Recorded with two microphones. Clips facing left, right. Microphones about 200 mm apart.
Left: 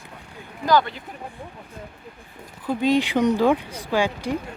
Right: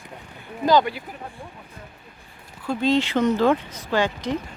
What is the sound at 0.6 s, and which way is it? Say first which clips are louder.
Speech: right 2 dB; 20° right (ahead or behind).